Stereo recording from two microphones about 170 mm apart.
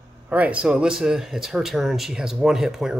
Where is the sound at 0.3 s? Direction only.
10° right (ahead or behind).